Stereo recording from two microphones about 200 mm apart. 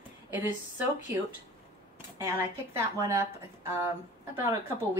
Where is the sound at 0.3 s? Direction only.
10° right (ahead or behind).